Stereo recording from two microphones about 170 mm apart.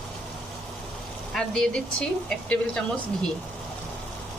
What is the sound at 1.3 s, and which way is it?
Speech, centre (ahead or behind).